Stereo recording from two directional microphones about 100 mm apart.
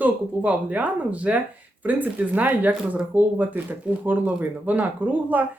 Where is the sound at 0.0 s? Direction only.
15° right (ahead or behind).